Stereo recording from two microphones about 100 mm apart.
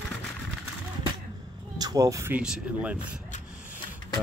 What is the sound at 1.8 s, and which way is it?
Speech, 35° right (ahead or behind).